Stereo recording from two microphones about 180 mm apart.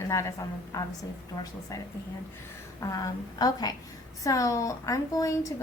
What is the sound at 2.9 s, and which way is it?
A woman's voice, 20° left (ahead or behind).